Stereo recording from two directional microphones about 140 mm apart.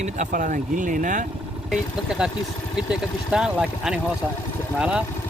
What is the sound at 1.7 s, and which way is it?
Speech, 5° right (ahead or behind).